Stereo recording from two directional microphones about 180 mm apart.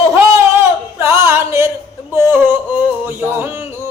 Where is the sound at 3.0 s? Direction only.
10° right (ahead or behind).